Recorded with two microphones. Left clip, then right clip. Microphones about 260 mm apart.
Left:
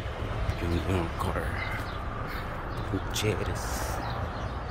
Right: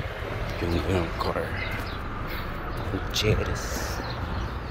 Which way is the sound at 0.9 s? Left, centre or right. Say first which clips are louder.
Right 3 dB; centre.